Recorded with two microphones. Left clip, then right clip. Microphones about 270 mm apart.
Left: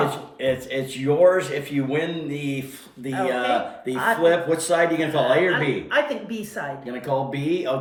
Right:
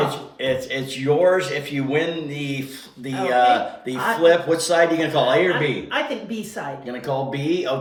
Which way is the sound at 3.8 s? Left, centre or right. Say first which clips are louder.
Right 1 dB; centre.